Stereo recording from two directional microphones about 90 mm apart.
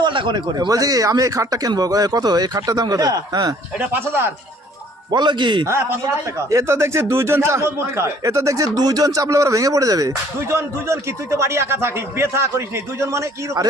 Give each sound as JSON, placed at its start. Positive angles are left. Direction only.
{"t": 0.0, "sound": "speech", "side_deg": -65}
{"t": 3.8, "sound": "speech", "side_deg": -25}
{"t": 5.1, "sound": "speech", "side_deg": -55}
{"t": 5.6, "sound": "a man's voice", "side_deg": -30}